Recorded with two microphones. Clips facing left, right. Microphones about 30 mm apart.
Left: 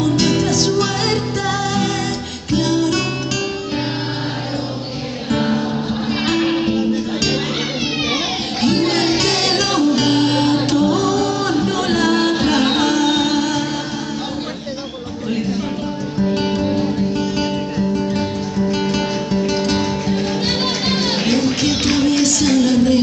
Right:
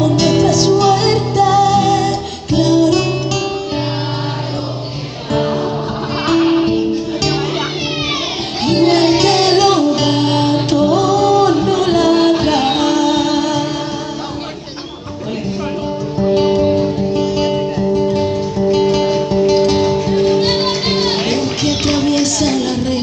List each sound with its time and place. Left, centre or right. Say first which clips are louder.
0.2 s music: right 4 dB; right
6.6 s music: right 3 dB; right
8.6 s music: right 5 dB; right
10.7 s music: right 3 dB; right
17.1 s music: right 4 dB; right